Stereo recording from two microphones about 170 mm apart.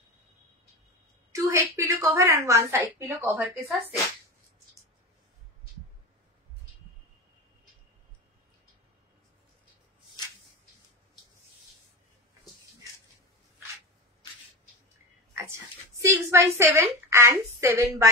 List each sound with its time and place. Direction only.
1.3 s a woman's voice: 20° right (ahead or behind)
16.0 s a woman's voice: 15° right (ahead or behind)